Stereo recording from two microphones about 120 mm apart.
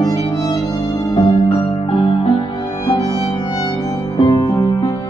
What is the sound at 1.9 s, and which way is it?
Music, 45° left (ahead or behind).